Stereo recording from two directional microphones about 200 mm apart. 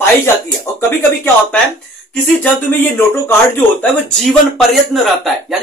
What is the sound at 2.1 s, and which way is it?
Speech, 10° left (ahead or behind).